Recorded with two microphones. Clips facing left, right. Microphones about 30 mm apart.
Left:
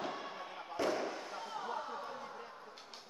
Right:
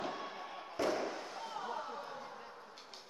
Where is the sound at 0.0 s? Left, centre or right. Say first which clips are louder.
Even; centre.